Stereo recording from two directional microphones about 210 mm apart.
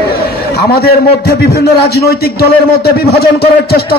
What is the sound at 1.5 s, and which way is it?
A man's voice, 50° left (ahead or behind).